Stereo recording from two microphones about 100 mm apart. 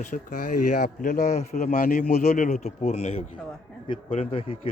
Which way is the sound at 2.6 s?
90° left.